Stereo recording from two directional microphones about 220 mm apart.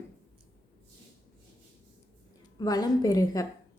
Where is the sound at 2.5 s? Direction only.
15° left (ahead or behind).